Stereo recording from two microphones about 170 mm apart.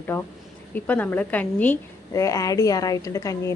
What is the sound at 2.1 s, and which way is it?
A woman's voice, 20° left (ahead or behind).